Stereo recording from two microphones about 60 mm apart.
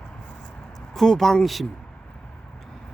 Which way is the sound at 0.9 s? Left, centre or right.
Centre.